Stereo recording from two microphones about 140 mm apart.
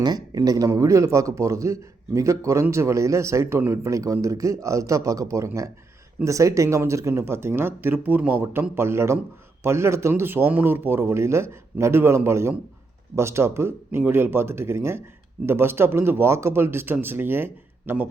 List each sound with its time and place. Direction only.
0.0 s speech: 30° right (ahead or behind)